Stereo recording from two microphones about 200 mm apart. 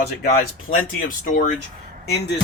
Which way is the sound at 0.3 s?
45° left (ahead or behind).